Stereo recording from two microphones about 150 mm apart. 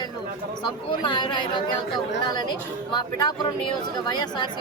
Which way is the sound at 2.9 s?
30° left (ahead or behind).